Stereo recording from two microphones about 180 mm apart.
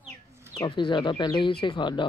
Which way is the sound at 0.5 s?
25° left (ahead or behind).